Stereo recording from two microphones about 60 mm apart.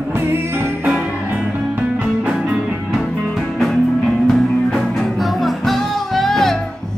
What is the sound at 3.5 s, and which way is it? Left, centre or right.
Music, centre.